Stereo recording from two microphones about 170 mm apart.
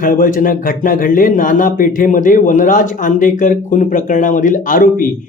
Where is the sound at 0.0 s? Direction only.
55° left (ahead or behind).